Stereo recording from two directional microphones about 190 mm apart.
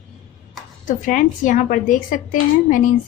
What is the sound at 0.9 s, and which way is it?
A woman's voice, 45° left (ahead or behind).